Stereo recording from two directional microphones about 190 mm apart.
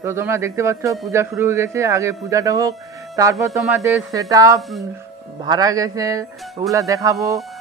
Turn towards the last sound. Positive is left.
turn(degrees=-15)  # may be behind; listen again after turning